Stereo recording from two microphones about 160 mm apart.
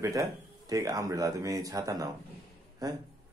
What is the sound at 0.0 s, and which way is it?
Speech, 20° right (ahead or behind).